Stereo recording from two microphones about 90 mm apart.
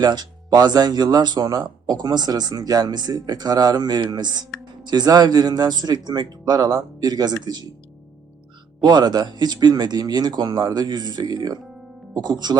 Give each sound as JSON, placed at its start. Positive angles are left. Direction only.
{"t": 0.0, "sound": "speech", "side_deg": -50}
{"t": 8.8, "sound": "speech", "side_deg": -55}